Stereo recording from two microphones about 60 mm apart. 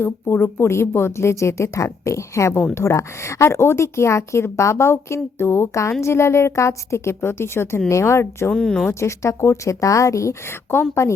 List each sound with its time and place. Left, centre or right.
0.4 s a woman's voice: left
7.9 s a woman's voice: left
8.5 s speech: centre
8.9 s speech: left